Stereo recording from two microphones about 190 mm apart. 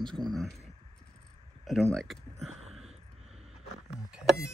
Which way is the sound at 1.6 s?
Centre (ahead or behind).